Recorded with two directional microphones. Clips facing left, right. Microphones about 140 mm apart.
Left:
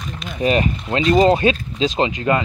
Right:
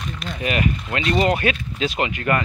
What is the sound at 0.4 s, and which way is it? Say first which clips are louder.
Speech: left 5 dB; 30° left (ahead or behind).